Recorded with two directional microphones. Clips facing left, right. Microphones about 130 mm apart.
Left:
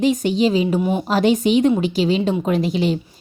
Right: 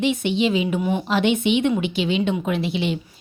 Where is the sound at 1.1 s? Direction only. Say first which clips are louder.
Left 4 dB; 40° left (ahead or behind).